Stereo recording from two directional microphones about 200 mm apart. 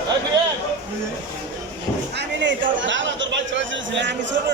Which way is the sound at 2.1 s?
65° right (ahead or behind).